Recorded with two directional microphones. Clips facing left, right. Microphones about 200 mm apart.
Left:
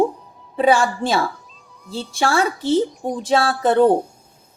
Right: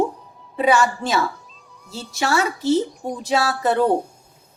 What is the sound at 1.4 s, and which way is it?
Cat, centre (ahead or behind).